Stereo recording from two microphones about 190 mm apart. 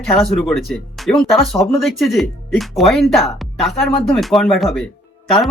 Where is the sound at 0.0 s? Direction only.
Centre (ahead or behind).